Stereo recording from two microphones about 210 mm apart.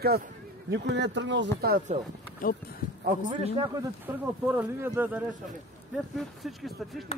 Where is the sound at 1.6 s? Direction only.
45° right (ahead or behind).